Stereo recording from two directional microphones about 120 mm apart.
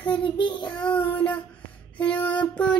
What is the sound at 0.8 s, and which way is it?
Music, 15° left (ahead or behind).